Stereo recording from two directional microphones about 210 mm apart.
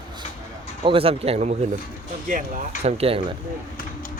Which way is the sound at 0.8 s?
25° right (ahead or behind).